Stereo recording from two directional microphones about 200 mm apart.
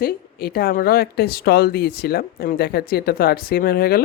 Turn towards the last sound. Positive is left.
turn(degrees=50)  # may be behind; listen again after turning